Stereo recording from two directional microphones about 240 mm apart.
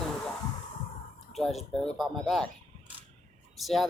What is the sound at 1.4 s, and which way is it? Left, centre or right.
Speech, centre.